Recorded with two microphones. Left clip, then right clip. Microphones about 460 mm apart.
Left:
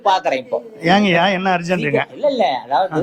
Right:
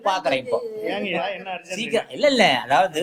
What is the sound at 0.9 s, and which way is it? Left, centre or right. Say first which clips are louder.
Speech: left 13 dB; left.